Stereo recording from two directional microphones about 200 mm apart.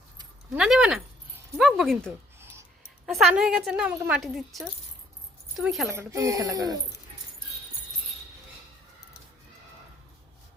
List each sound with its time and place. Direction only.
0.5 s a woman's voice: 5° right (ahead or behind)
2.4 s a sound: 10° right (ahead or behind)
3.3 s a woman's voice: 5° right (ahead or behind)
5.9 s speech: 15° right (ahead or behind)